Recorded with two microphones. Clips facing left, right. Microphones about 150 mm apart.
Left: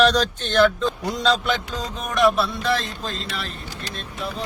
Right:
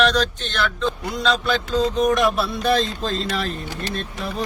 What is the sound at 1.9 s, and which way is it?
Music, centre (ahead or behind).